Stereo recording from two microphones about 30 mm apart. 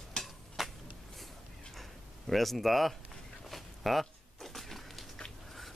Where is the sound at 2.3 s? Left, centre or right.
Centre.